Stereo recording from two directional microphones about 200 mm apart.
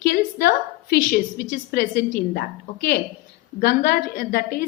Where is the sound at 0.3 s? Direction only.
50° left (ahead or behind).